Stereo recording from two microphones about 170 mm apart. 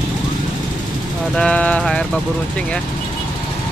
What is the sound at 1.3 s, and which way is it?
Music, 5° left (ahead or behind).